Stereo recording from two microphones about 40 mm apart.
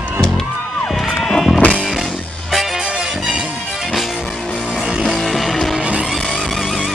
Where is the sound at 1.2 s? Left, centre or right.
Centre.